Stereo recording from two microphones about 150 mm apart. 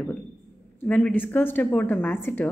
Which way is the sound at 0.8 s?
10° left (ahead or behind).